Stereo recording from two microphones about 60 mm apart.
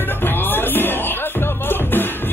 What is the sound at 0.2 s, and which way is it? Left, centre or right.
Music, left.